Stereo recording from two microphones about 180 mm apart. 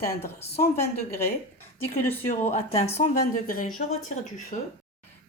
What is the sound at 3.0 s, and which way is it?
A woman's voice, 50° left (ahead or behind).